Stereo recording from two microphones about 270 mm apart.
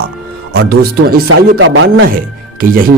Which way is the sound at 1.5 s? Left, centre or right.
Right.